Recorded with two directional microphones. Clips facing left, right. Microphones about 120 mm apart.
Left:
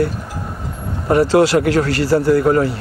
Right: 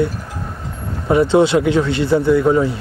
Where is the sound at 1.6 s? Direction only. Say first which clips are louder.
Even; 75° left (ahead or behind).